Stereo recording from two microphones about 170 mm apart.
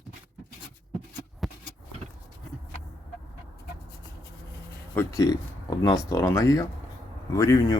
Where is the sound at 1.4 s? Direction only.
Centre (ahead or behind).